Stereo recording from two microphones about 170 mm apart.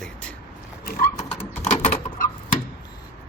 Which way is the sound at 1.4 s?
40° left (ahead or behind).